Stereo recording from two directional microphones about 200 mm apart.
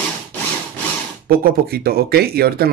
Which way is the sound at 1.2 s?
50° right (ahead or behind).